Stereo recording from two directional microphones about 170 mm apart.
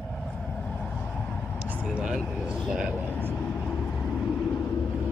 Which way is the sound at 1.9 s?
5° right (ahead or behind).